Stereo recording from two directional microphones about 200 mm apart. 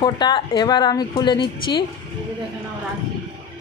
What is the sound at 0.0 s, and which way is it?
A woman's voice, 20° left (ahead or behind).